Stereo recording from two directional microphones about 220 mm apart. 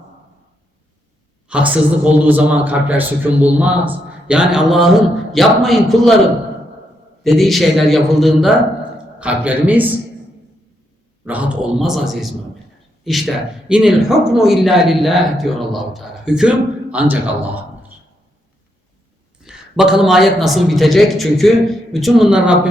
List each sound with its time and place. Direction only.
1.5 s a man's voice: 5° right (ahead or behind)
7.3 s a man's voice: centre (ahead or behind)
11.3 s speech: 5° right (ahead or behind)
19.4 s speech: 5° right (ahead or behind)